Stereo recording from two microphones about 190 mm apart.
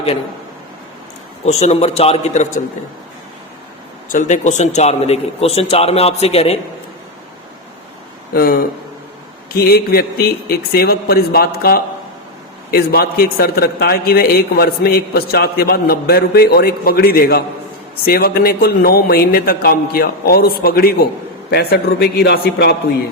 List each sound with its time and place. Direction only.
1.5 s a man's voice: 35° left (ahead or behind)
4.1 s a man's voice: 40° left (ahead or behind)
8.3 s a man's voice: 50° left (ahead or behind)